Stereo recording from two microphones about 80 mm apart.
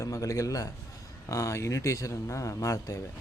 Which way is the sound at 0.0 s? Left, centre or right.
Left.